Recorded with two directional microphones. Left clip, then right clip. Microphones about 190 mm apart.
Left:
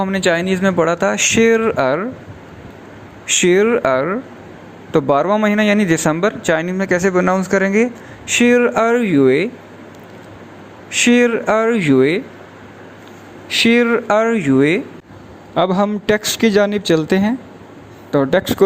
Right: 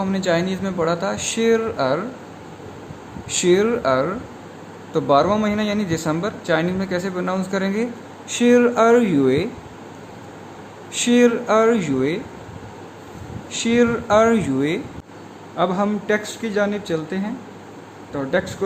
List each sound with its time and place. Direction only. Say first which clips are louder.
0.0 s speech: left 4 dB; 30° left (ahead or behind)
3.4 s speech: left 4 dB; 30° left (ahead or behind)
10.9 s speech: left 3 dB; 25° left (ahead or behind)
13.5 s speech: left 5 dB; 30° left (ahead or behind)
15.5 s a woman's voice: left 5 dB; 45° left (ahead or behind)